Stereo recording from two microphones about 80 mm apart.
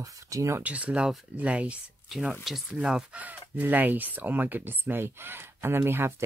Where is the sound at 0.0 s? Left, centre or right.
Right.